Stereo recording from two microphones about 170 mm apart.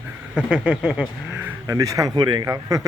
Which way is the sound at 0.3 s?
5° right (ahead or behind).